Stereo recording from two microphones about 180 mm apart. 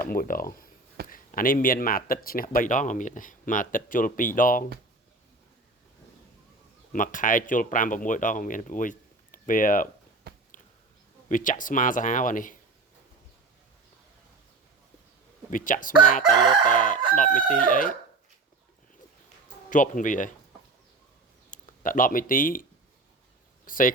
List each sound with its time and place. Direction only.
0.0 s speech: 50° left (ahead or behind)
6.9 s speech: 45° left (ahead or behind)
10.3 s biting: 60° right (ahead or behind)
11.3 s speech: 45° left (ahead or behind)
15.4 s speech: 50° left (ahead or behind)
16.2 s crowing: 25° right (ahead or behind)
16.7 s chicken: 45° left (ahead or behind)
19.7 s speech: 45° left (ahead or behind)
21.5 s speech: 50° left (ahead or behind)
23.6 s speech: 50° left (ahead or behind)